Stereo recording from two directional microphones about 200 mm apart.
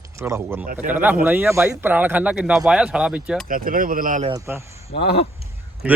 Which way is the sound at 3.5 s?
45° right (ahead or behind).